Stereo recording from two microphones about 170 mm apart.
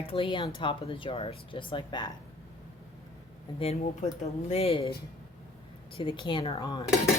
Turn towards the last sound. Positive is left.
turn(degrees=25)  # may be behind; listen again after turning